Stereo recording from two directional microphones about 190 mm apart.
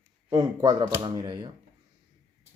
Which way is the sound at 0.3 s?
20° right (ahead or behind).